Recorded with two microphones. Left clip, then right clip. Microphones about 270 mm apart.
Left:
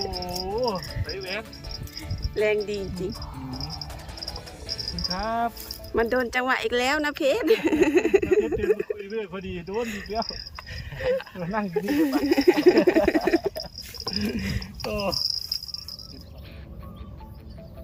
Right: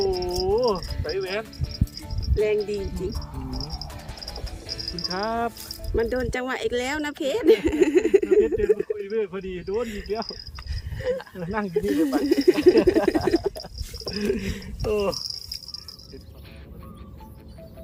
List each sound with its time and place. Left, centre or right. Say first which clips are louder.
0.0 s insect: right 6 dB; centre
0.3 s insect: right 4 dB; centre
1.0 s music: right 8 dB; centre
2.3 s speech: right 1 dB; centre
3.6 s music: even; centre
5.0 s cricket: even; centre
5.9 s speech: left 2 dB; centre
11.3 s speech: right 1 dB; centre
13.3 s a sound: even; centre
14.1 s a sound: right 4 dB; centre
14.8 s speech: right 3 dB; centre